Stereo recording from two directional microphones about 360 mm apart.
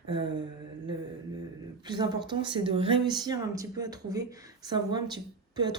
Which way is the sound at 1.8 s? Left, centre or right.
Centre.